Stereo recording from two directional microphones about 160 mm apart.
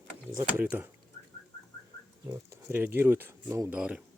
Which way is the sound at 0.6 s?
10° right (ahead or behind).